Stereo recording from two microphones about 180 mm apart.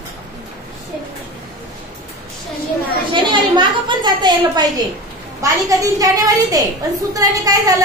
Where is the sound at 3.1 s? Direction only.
25° right (ahead or behind).